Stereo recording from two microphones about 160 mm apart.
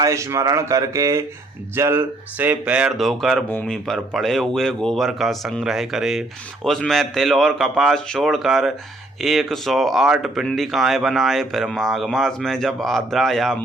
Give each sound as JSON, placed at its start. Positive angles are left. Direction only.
{"t": 0.0, "sound": "speech", "side_deg": -20}